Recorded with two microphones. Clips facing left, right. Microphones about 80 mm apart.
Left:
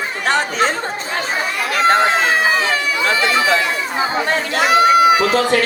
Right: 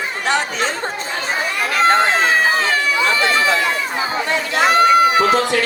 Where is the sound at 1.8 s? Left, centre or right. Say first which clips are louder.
Left 1 dB; right.